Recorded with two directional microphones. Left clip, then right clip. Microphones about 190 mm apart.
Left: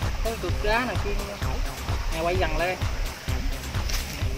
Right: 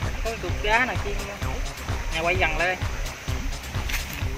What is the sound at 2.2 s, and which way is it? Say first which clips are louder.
Speech: right 3 dB; 35° left (ahead or behind).